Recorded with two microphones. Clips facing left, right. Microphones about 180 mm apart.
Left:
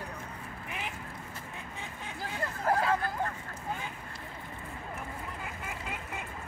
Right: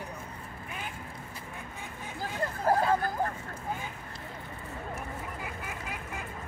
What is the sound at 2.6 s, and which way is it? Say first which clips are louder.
Hubbub: right 2 dB; 30° right (ahead or behind).